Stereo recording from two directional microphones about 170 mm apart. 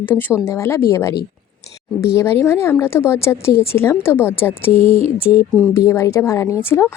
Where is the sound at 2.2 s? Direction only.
15° left (ahead or behind).